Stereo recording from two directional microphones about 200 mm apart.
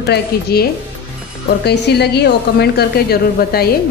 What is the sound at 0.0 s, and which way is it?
A woman's voice, 55° left (ahead or behind).